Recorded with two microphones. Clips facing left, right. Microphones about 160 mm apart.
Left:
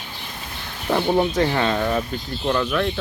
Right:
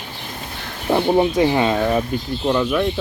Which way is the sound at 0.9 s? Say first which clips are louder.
Right 3 dB; 15° right (ahead or behind).